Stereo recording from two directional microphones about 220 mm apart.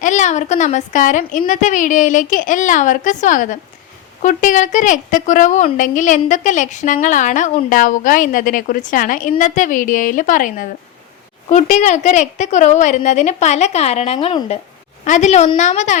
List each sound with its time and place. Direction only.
0.0 s a woman's voice: 35° left (ahead or behind)